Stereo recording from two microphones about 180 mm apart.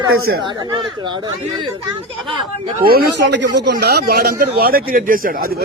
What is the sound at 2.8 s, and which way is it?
Speech, 55° right (ahead or behind).